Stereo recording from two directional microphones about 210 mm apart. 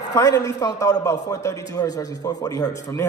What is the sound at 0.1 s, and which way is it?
A man's voice, 15° left (ahead or behind).